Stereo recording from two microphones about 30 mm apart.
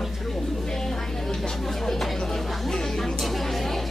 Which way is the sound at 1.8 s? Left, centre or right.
Centre.